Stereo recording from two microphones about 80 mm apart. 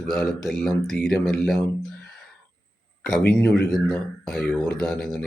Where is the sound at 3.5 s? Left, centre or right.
Centre.